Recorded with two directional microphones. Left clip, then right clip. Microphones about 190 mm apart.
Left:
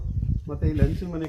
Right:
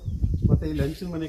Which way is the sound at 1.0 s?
10° left (ahead or behind).